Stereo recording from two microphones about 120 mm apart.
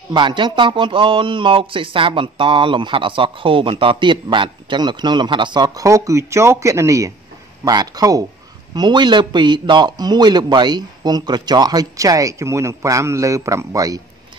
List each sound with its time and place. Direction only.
0.1 s speech: 40° right (ahead or behind)